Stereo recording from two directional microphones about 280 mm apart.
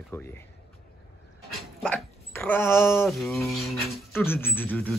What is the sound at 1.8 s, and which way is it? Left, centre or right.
Speech, centre.